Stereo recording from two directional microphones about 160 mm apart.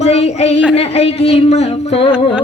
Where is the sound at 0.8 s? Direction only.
40° left (ahead or behind).